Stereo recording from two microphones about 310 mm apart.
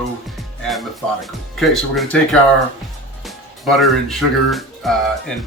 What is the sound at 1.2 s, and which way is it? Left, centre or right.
Speech, centre.